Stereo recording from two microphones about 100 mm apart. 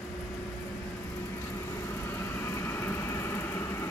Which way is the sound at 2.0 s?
25° left (ahead or behind).